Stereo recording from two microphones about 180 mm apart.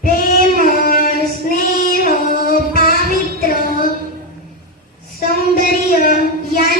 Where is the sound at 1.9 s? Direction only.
55° left (ahead or behind).